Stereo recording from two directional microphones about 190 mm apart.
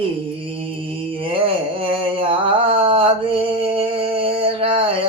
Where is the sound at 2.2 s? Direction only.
30° right (ahead or behind).